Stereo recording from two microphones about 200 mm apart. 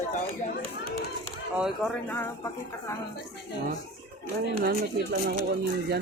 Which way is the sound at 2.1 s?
10° left (ahead or behind).